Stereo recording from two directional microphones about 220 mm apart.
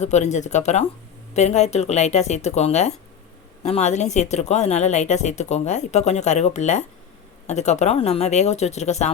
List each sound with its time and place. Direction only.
0.0 s speech: 30° left (ahead or behind)